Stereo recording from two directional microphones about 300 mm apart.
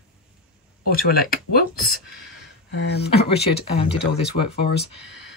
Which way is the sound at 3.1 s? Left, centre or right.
Centre.